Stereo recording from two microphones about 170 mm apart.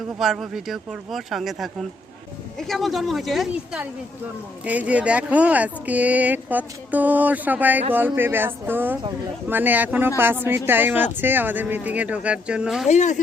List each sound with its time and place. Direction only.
0.2 s speech: centre (ahead or behind)
12.9 s speech: 45° left (ahead or behind)